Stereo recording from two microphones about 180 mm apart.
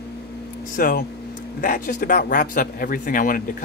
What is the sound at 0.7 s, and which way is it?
Speech, 50° left (ahead or behind).